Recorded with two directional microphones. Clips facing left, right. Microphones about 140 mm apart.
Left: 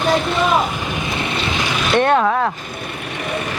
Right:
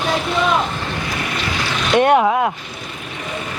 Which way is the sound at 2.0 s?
15° right (ahead or behind).